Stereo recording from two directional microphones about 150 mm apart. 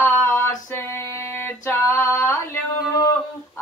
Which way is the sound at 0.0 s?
15° left (ahead or behind).